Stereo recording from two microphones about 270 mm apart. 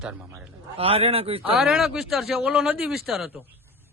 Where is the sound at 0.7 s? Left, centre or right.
Right.